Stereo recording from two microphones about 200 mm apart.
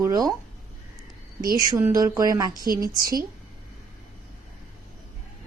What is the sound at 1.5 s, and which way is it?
Speech, 15° right (ahead or behind).